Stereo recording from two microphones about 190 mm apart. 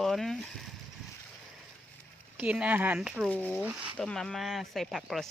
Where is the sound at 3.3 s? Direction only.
5° left (ahead or behind).